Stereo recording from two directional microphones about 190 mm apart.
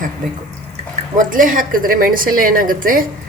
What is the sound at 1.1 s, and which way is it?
A woman's voice, 45° right (ahead or behind).